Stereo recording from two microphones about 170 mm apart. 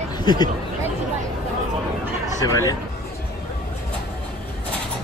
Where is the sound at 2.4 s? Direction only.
20° left (ahead or behind).